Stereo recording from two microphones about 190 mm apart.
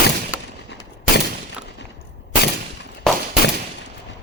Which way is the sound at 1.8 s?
60° left (ahead or behind).